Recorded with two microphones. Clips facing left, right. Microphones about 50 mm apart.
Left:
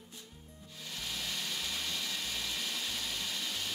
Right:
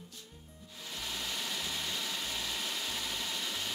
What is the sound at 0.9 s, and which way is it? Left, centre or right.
Vehicle, centre.